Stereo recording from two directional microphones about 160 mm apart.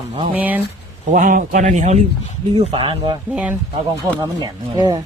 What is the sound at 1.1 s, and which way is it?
Speech, 60° right (ahead or behind).